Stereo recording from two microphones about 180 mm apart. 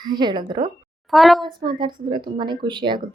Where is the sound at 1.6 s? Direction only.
25° right (ahead or behind).